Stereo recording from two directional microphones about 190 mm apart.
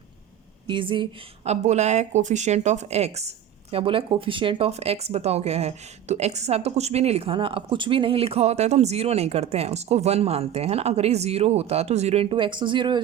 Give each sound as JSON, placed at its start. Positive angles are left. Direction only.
{"t": 0.7, "sound": "speech", "side_deg": -25}
{"t": 1.5, "sound": "speech", "side_deg": -35}